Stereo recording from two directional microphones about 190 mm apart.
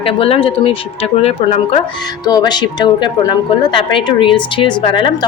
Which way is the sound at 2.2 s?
20° left (ahead or behind).